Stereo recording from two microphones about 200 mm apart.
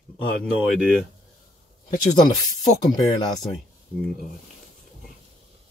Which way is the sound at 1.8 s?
20° left (ahead or behind).